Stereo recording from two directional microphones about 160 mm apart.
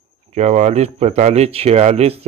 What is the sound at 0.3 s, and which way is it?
Speech, 45° right (ahead or behind).